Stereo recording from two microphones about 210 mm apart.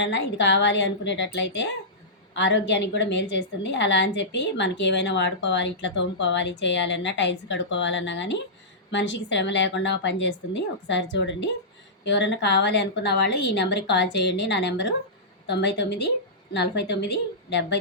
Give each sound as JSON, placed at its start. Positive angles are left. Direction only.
{"t": 0.0, "sound": "a woman's voice", "side_deg": 60}